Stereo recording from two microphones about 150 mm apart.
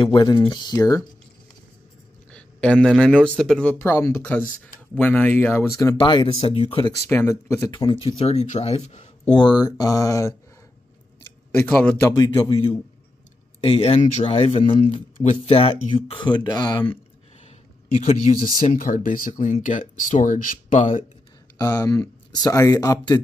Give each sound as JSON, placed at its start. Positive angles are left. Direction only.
{"t": 0.0, "sound": "speech", "side_deg": 30}
{"t": 2.3, "sound": "speech", "side_deg": 5}
{"t": 3.8, "sound": "speech", "side_deg": 20}
{"t": 4.9, "sound": "speech", "side_deg": 10}
{"t": 5.9, "sound": "speech", "side_deg": 35}
{"t": 7.1, "sound": "speech", "side_deg": 15}
{"t": 7.7, "sound": "speech", "side_deg": 35}
{"t": 9.3, "sound": "speech", "side_deg": 30}
{"t": 11.5, "sound": "speech", "side_deg": 10}
{"t": 12.1, "sound": "speech", "side_deg": 25}
{"t": 13.6, "sound": "speech", "side_deg": 40}
{"t": 18.4, "sound": "speech", "side_deg": 35}
{"t": 18.8, "sound": "speech", "side_deg": 60}
{"t": 21.5, "sound": "speech", "side_deg": 25}